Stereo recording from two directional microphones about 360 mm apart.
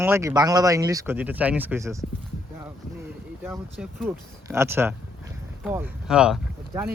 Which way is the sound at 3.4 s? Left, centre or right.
Centre.